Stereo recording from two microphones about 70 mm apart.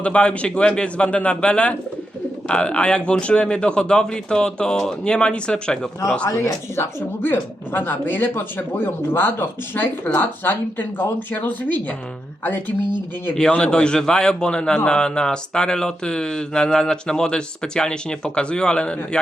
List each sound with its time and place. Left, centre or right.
0.0 s speech: centre
7.2 s speech: left
13.5 s speech: centre